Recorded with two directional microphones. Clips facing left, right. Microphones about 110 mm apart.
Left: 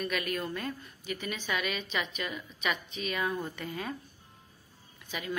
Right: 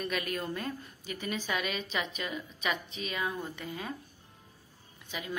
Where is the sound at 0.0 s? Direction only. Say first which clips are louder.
Left 1 dB; 30° right (ahead or behind).